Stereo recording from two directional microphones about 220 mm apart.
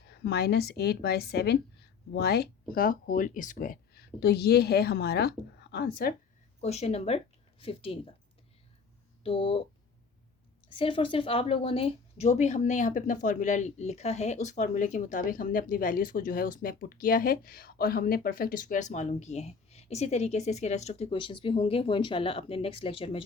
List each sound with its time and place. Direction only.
0.1 s a woman's voice: 45° left (ahead or behind)
6.6 s speech: 30° left (ahead or behind)
9.2 s speech: 25° left (ahead or behind)
10.7 s a woman's voice: 25° left (ahead or behind)